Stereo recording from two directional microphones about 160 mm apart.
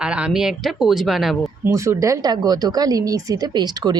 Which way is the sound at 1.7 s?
20° right (ahead or behind).